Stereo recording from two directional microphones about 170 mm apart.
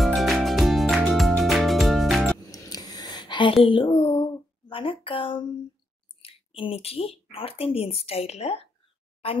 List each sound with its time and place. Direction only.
0.0 s music: centre (ahead or behind)
2.5 s a sound: 20° left (ahead or behind)
6.2 s speech: 35° left (ahead or behind)